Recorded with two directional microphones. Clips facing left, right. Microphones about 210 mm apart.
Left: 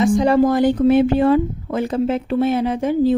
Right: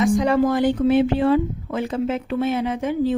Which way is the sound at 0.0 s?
30° left (ahead or behind).